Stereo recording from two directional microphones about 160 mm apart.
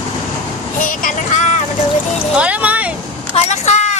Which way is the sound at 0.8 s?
55° left (ahead or behind).